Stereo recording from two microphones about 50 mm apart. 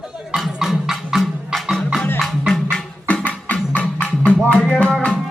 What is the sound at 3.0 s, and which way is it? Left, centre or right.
Music, left.